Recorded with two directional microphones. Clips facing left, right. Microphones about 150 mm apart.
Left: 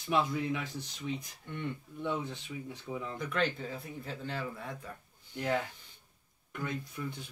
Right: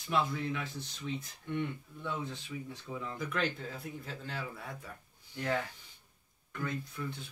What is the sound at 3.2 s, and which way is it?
Speech, 5° right (ahead or behind).